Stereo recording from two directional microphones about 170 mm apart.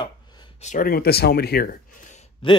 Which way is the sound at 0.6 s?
55° left (ahead or behind).